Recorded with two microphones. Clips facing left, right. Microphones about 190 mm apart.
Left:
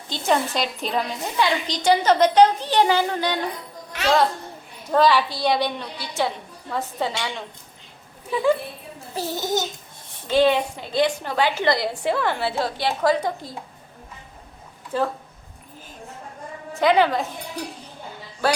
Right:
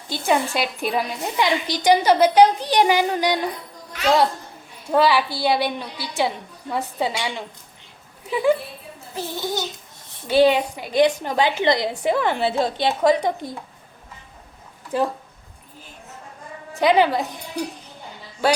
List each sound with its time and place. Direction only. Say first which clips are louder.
0.1 s a woman's voice: right 1 dB; 10° right (ahead or behind)
4.9 s a woman's voice: even; 10° right (ahead or behind)
9.1 s a child's voice: left 2 dB; 45° left (ahead or behind)
10.2 s a woman's voice: right 2 dB; 15° right (ahead or behind)
14.9 s a woman's voice: right 2 dB; 15° right (ahead or behind)
16.8 s a woman's voice: right 1 dB; 15° right (ahead or behind)